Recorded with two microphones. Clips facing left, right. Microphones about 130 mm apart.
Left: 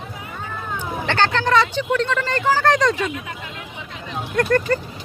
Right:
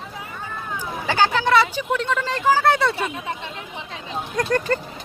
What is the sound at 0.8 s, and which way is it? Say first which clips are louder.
Speech: even; 10° right (ahead or behind).